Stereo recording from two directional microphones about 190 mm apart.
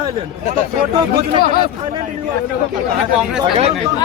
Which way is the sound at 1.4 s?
50° left (ahead or behind).